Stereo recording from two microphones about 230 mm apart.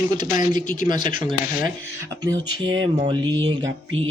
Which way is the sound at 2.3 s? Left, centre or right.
Centre.